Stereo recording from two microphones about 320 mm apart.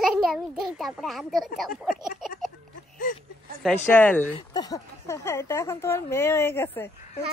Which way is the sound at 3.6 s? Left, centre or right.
Centre.